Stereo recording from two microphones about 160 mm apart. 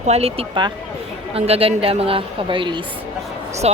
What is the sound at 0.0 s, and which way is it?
A woman's voice, 40° right (ahead or behind).